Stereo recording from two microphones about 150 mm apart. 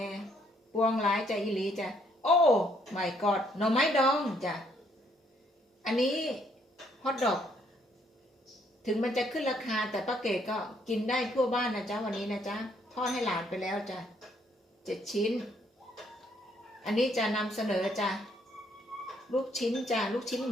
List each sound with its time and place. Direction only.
0.0 s a sound: centre (ahead or behind)
0.9 s a woman's voice: centre (ahead or behind)
5.8 s a woman's voice: centre (ahead or behind)
8.8 s a woman's voice: centre (ahead or behind)
16.8 s a woman's voice: centre (ahead or behind)
19.0 s a sound: centre (ahead or behind)
19.5 s a woman's voice: centre (ahead or behind)